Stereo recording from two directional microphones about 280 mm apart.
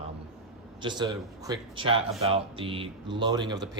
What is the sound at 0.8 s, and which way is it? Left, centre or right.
Speech, centre.